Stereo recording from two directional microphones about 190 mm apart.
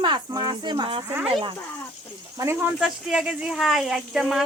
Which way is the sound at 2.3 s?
10° right (ahead or behind).